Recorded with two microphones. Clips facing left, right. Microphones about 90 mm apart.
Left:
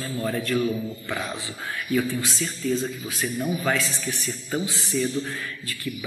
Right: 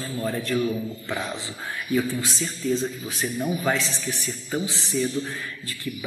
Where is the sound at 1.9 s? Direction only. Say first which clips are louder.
Even; 20° right (ahead or behind).